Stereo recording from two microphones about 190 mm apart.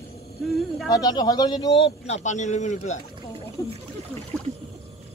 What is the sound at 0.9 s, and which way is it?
Speech, 20° left (ahead or behind).